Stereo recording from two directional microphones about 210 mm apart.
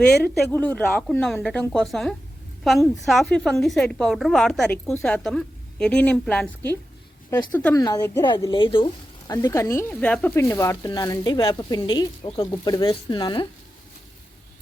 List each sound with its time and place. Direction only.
0.5 s a woman's voice: 5° left (ahead or behind)